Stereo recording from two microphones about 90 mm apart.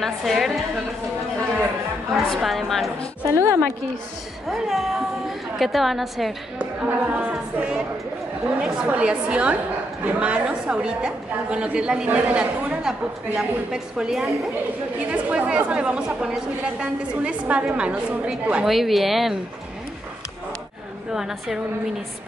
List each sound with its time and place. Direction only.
0.0 s a woman's voice: centre (ahead or behind)
2.1 s a woman's voice: centre (ahead or behind)
3.3 s a woman's voice: 35° right (ahead or behind)
4.5 s a woman's voice: centre (ahead or behind)
6.6 s a woman's voice: 15° right (ahead or behind)
18.7 s a woman's voice: centre (ahead or behind)
21.1 s a woman's voice: 5° right (ahead or behind)